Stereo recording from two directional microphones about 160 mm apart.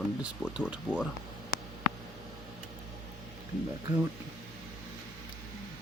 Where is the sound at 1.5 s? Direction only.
65° left (ahead or behind).